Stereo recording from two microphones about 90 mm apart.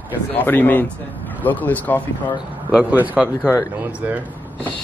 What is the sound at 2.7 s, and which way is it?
Speech, 15° right (ahead or behind).